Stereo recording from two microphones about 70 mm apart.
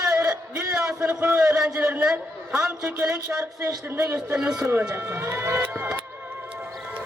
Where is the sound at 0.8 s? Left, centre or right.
Centre.